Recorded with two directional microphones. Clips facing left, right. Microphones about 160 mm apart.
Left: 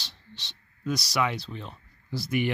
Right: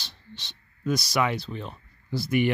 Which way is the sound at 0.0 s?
55° right (ahead or behind).